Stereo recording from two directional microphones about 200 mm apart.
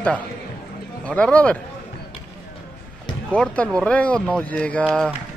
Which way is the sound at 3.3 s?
5° left (ahead or behind).